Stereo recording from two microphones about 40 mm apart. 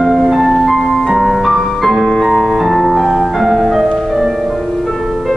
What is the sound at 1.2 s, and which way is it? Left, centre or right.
Music, centre.